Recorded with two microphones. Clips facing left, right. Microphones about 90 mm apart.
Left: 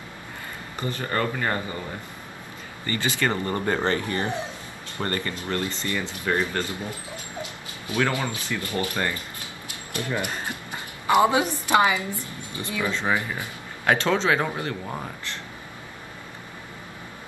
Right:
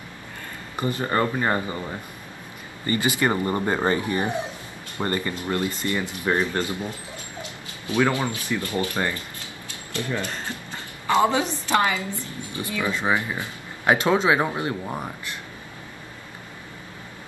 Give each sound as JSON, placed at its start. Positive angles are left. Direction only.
{"t": 0.7, "sound": "speech", "side_deg": -20}
{"t": 2.9, "sound": "speech", "side_deg": -15}
{"t": 9.9, "sound": "a woman's voice", "side_deg": 15}
{"t": 12.1, "sound": "speech", "side_deg": -20}